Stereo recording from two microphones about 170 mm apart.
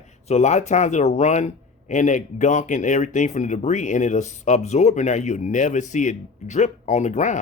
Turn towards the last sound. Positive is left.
turn(degrees=45)  # may be behind; listen again after turning